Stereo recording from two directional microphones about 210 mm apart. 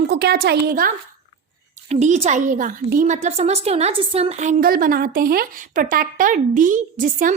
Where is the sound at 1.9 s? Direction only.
35° right (ahead or behind).